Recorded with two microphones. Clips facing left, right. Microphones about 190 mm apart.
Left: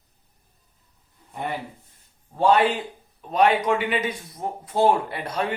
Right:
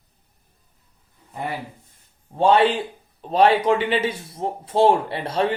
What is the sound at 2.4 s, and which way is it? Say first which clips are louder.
A man's voice: right 2 dB; 25° right (ahead or behind).